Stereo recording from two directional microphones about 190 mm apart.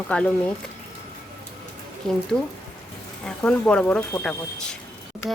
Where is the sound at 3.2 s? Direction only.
5° left (ahead or behind).